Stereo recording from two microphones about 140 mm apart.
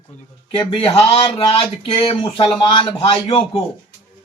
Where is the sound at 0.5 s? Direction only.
40° left (ahead or behind).